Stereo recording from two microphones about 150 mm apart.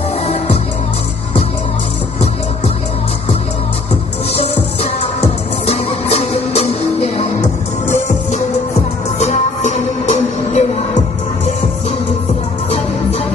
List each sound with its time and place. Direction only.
5.0 s music: 40° left (ahead or behind)